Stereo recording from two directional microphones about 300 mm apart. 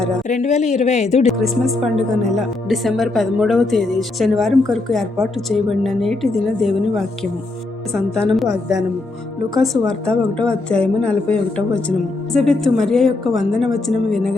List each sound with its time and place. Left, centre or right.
0.3 s a woman's voice: left
1.3 s a woman's voice: centre